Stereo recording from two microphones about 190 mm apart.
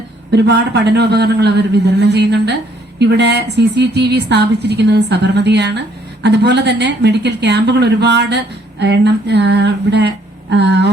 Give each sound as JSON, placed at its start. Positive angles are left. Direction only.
{"t": 0.3, "sound": "a woman's voice", "side_deg": -60}